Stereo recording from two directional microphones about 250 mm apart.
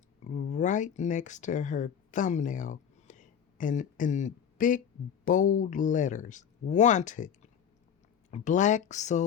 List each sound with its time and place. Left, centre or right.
0.3 s speech: left
8.3 s speech: left